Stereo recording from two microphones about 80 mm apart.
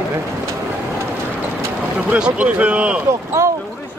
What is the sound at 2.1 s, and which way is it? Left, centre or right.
Speech, centre.